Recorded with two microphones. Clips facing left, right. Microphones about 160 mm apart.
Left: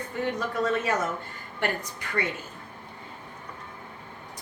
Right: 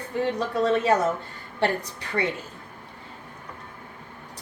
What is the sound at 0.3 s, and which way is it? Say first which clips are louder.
A woman's voice: right 4 dB; 30° right (ahead or behind).